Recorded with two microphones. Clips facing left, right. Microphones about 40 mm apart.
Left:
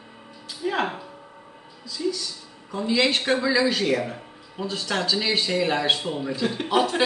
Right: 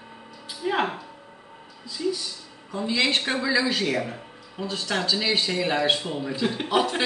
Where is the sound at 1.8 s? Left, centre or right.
Centre.